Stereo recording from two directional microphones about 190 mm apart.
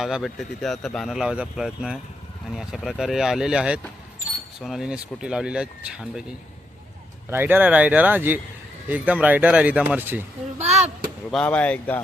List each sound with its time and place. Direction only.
0.0 s speech: centre (ahead or behind)
10.6 s speech: 35° right (ahead or behind)
11.3 s speech: 5° left (ahead or behind)